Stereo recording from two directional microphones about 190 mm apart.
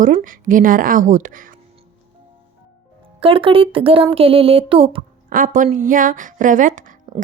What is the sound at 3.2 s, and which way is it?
Speech, 30° right (ahead or behind).